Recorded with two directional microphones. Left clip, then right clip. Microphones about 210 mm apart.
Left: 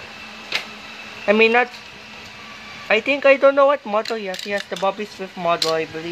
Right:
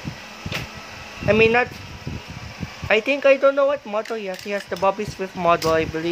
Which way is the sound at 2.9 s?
5° right (ahead or behind).